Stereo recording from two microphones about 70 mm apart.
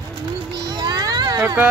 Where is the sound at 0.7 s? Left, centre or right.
Right.